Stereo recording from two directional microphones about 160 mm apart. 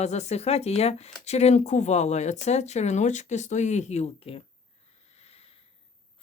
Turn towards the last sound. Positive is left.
turn(degrees=40)  # may be behind; listen again after turning